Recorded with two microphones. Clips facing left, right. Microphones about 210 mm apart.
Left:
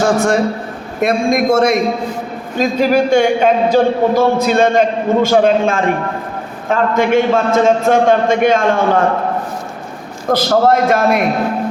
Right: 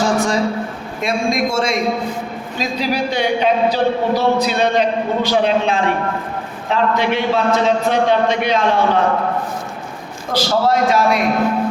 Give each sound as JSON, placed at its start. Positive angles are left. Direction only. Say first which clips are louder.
{"t": 0.0, "sound": "a sound", "louder": "left 4 dB", "side_deg": 60}
{"t": 1.0, "sound": "a man's voice", "louder": "left 5 dB", "side_deg": 55}
{"t": 10.3, "sound": "a man's voice", "louder": "left 4 dB", "side_deg": 50}